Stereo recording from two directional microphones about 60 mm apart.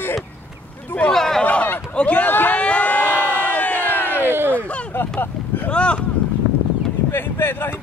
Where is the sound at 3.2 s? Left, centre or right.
Right.